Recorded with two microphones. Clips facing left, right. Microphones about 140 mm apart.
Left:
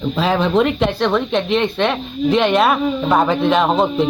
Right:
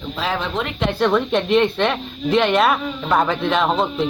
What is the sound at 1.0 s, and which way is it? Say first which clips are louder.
Speech: even; centre (ahead or behind).